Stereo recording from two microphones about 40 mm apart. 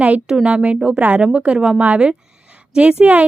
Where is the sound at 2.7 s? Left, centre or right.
Right.